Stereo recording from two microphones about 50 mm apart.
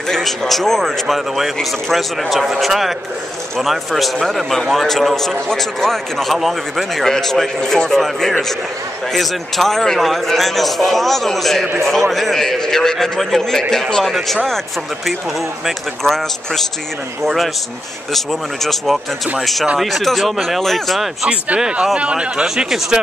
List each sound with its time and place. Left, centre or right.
0.1 s a man's voice: centre
16.0 s a man's voice: centre
21.9 s speech: right